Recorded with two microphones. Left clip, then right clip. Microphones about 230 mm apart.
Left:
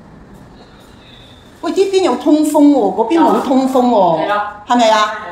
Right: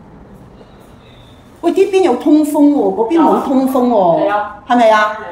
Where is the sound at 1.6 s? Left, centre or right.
Centre.